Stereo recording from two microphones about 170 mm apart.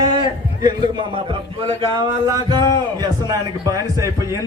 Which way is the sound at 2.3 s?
25° right (ahead or behind).